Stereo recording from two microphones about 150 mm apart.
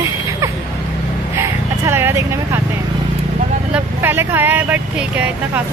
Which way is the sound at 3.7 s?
15° right (ahead or behind).